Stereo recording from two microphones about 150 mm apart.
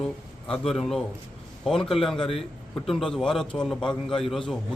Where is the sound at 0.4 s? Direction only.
5° left (ahead or behind).